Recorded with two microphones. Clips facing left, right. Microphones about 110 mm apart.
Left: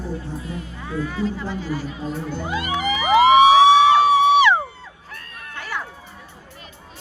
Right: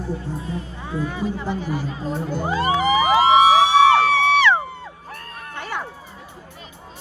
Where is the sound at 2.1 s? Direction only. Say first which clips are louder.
Right 4 dB; 40° right (ahead or behind).